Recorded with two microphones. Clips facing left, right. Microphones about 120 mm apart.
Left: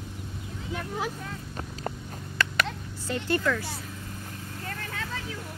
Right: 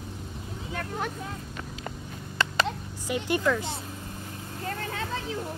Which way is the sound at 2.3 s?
25° right (ahead or behind).